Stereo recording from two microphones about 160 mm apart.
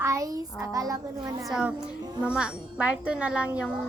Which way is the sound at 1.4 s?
5° right (ahead or behind).